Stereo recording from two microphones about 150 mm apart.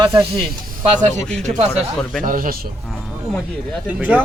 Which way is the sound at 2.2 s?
65° right (ahead or behind).